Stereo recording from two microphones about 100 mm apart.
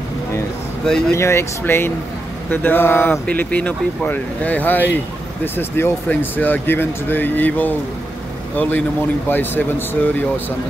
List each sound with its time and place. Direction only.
1.1 s speech: 30° left (ahead or behind)